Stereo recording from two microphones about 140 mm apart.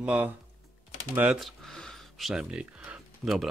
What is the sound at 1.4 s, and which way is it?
Typing, centre (ahead or behind).